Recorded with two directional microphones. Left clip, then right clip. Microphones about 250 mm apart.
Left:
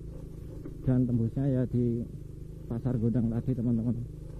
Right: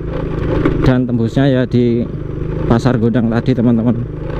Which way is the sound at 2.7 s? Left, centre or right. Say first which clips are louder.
Right 18 dB; centre.